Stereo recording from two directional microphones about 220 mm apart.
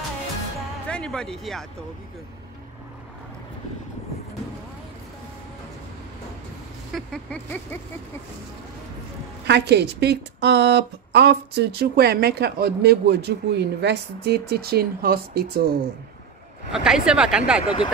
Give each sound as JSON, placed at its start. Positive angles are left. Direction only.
{"t": 0.8, "sound": "speech", "side_deg": 5}
{"t": 6.9, "sound": "vehicle", "side_deg": 5}
{"t": 9.5, "sound": "a woman's voice", "side_deg": -50}
{"t": 16.7, "sound": "vehicle", "side_deg": -5}